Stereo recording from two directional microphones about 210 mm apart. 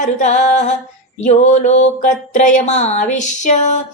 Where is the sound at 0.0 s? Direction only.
35° left (ahead or behind).